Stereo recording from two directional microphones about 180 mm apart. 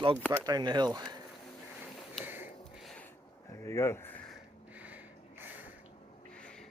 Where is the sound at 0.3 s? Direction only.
20° right (ahead or behind).